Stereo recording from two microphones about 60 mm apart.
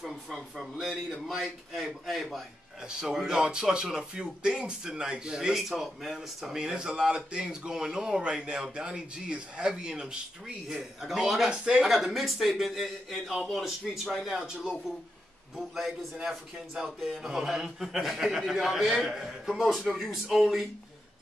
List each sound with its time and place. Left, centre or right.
0.0 s a man's voice: centre
11.9 s a man's voice: centre